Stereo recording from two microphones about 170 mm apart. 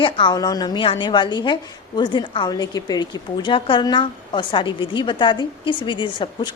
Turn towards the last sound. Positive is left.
turn(degrees=30)  # may be behind; listen again after turning